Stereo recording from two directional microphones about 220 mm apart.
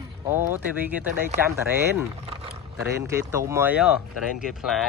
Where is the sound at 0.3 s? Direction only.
10° right (ahead or behind).